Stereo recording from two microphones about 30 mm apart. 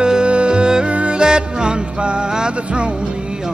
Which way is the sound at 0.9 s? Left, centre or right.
Right.